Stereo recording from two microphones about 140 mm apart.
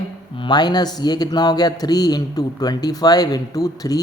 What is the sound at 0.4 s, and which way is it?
A man's voice, 30° left (ahead or behind).